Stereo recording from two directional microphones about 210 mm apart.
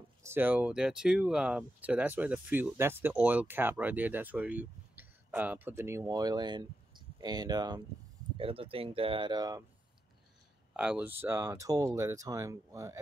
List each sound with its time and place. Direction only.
0.2 s speech: 10° right (ahead or behind)
10.7 s speech: 5° right (ahead or behind)